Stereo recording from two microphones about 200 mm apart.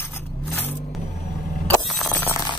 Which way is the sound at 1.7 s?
Centre (ahead or behind).